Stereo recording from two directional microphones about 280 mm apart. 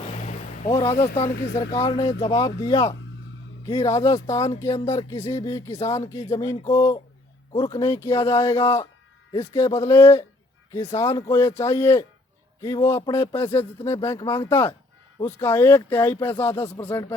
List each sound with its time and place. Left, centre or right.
0.0 s vehicle: left
1.5 s speech: centre